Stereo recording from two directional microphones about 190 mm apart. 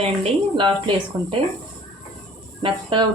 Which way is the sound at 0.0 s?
30° right (ahead or behind).